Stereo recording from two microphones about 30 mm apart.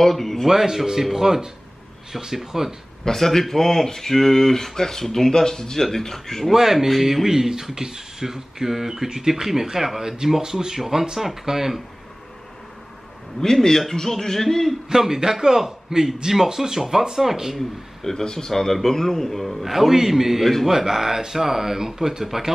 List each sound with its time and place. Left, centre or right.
0.0 s speech: centre
0.5 s speech: centre
3.1 s speech: centre
6.4 s a man's voice: centre
7.2 s speech: centre
13.4 s speech: centre
14.9 s speech: centre
17.6 s speech: centre
18.5 s a man's voice: centre